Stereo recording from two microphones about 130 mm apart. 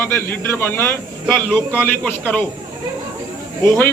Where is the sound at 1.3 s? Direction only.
5° left (ahead or behind).